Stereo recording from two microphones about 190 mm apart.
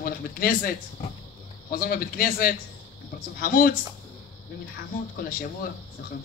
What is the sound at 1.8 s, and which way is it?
Speech, 50° left (ahead or behind).